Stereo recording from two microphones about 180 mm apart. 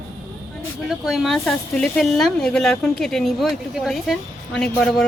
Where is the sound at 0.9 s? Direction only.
Centre (ahead or behind).